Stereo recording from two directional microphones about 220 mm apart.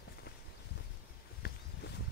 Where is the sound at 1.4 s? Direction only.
50° left (ahead or behind).